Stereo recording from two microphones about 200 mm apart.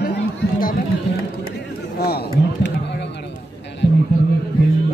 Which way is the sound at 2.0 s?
50° left (ahead or behind).